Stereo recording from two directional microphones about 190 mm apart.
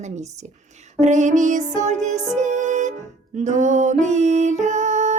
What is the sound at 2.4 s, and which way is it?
Music, 40° right (ahead or behind).